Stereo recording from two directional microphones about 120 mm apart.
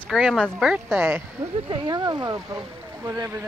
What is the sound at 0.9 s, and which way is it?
Speech, 20° right (ahead or behind).